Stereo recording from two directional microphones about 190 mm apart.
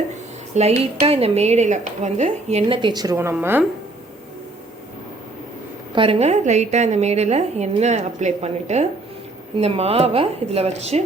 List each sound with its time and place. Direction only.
0.5 s speech: 35° right (ahead or behind); by 3.7 s 10° right (ahead or behind)
5.9 s speech: 30° right (ahead or behind)